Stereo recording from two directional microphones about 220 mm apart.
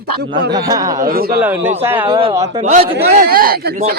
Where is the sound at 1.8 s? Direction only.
10° right (ahead or behind).